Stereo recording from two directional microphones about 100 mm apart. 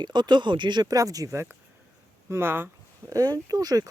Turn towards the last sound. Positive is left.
turn(degrees=-40)  # may be behind; listen again after turning